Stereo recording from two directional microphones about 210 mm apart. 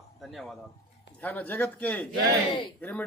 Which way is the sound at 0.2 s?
Centre (ahead or behind).